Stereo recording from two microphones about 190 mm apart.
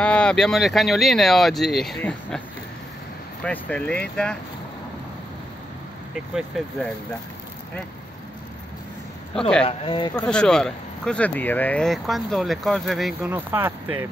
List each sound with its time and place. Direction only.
0.0 s speech: 5° left (ahead or behind)
3.4 s speech: 5° left (ahead or behind)
6.3 s speech: centre (ahead or behind)
9.3 s speech: 5° left (ahead or behind)
9.7 s speech: 30° left (ahead or behind)
10.2 s speech: 5° left (ahead or behind)